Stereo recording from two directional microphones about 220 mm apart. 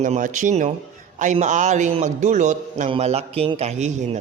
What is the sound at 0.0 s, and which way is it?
A man's voice, 35° right (ahead or behind).